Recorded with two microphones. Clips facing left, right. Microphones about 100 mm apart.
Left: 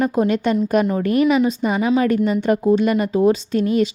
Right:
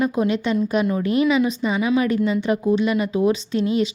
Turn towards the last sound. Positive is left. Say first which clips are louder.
# left 3 dB
turn(degrees=45)  # may be behind; listen again after turning